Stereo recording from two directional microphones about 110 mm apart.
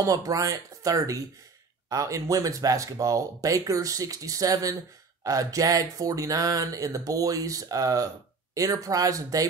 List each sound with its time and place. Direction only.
0.0 s speech: 30° right (ahead or behind)